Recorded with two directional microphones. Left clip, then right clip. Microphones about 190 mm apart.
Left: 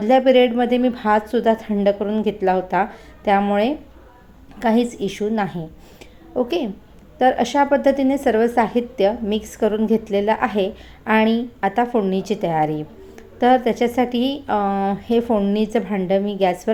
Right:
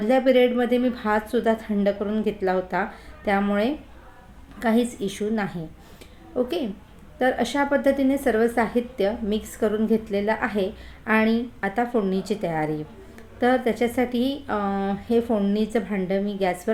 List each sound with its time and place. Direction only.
0.0 s a woman's voice: 15° left (ahead or behind)